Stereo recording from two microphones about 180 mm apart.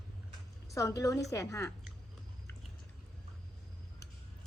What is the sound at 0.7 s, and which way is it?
Speech, 15° left (ahead or behind).